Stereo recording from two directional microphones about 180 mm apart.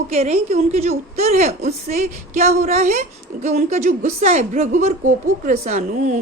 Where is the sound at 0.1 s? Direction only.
35° right (ahead or behind).